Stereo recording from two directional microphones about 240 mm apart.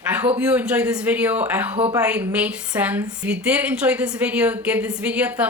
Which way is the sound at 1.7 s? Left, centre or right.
Right.